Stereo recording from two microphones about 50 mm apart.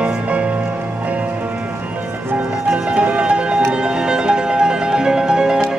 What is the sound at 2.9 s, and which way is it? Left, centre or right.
Music, right.